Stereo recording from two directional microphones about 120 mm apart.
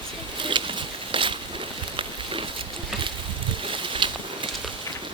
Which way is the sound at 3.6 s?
45° right (ahead or behind).